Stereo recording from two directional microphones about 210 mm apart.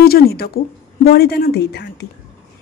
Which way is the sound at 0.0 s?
45° left (ahead or behind).